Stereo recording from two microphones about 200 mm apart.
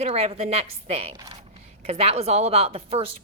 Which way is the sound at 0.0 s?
30° right (ahead or behind).